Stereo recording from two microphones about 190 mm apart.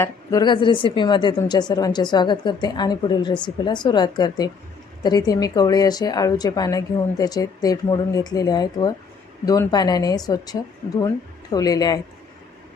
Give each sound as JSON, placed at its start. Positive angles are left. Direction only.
{"t": 0.0, "sound": "a woman's voice", "side_deg": 20}